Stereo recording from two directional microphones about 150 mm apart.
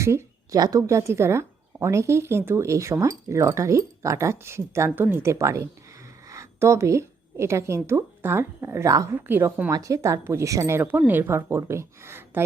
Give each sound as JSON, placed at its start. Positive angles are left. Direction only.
{"t": 0.0, "sound": "speech", "side_deg": -20}
{"t": 6.2, "sound": "a sound", "side_deg": -20}
{"t": 7.9, "sound": "speech", "side_deg": -15}